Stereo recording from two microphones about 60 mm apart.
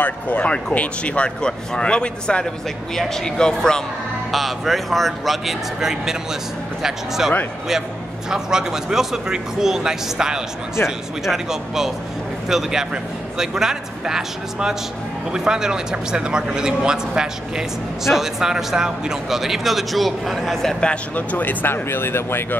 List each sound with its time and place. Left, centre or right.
0.0 s speech: left
4.3 s a man's voice: centre
20.8 s speech: left